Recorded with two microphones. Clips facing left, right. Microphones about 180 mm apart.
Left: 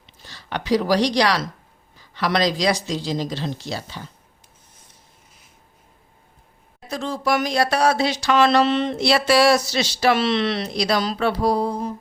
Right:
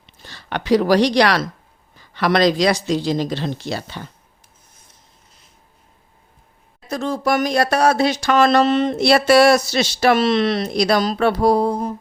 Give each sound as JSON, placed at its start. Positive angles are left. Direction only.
{"t": 0.0, "sound": "speech", "side_deg": -60}
{"t": 6.8, "sound": "speech", "side_deg": -45}